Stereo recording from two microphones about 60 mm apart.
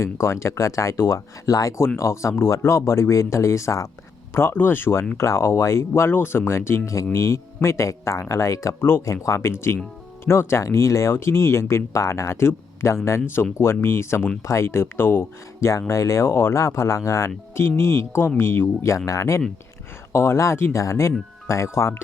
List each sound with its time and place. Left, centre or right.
0.0 s speech: left
1.5 s speech: left
2.0 s speech: left
4.5 s speech: left
8.8 s speech: left
9.0 s speech: left
15.9 s speech: left